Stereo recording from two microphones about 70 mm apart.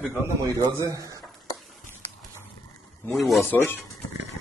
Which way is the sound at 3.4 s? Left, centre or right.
Left.